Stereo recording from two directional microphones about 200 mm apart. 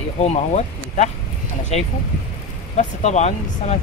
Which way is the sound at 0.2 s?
35° left (ahead or behind).